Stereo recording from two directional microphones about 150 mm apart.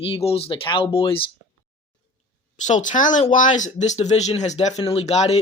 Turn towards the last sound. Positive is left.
turn(degrees=45)  # may be behind; listen again after turning